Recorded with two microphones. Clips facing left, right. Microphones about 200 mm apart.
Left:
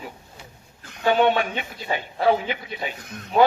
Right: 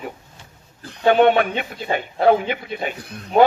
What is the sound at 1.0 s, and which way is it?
Speech, 55° right (ahead or behind).